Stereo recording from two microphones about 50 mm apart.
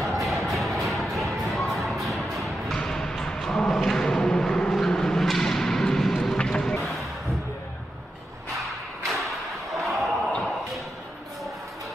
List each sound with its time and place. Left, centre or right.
0.0 s music: centre
2.7 s music: centre
3.4 s a sound: centre
4.7 s whip: centre
6.3 s music: centre
8.5 s thump: centre